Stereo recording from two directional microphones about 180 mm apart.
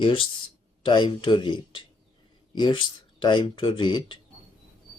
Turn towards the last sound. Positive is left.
turn(degrees=25)  # may be behind; listen again after turning